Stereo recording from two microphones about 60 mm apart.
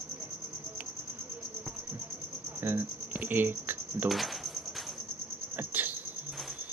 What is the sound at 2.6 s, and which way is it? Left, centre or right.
Speech, right.